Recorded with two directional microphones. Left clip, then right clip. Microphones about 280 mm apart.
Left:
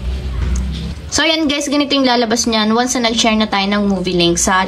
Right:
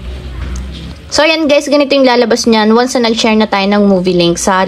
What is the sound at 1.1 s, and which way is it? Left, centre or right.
Speech, centre.